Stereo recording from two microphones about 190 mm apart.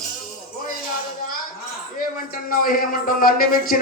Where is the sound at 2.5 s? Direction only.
50° left (ahead or behind).